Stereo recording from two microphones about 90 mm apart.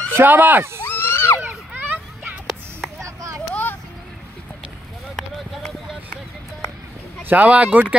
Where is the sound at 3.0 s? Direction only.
35° right (ahead or behind).